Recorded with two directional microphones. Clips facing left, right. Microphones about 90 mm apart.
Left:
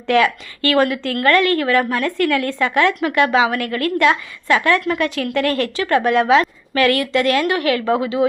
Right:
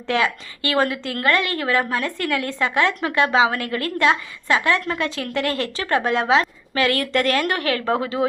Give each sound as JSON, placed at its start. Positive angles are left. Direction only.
{"t": 0.1, "sound": "a woman's voice", "side_deg": -25}
{"t": 7.0, "sound": "speech", "side_deg": -40}